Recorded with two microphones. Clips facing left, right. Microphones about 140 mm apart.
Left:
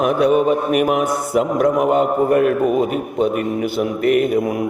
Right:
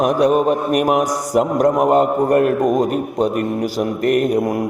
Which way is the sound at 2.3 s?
45° right (ahead or behind).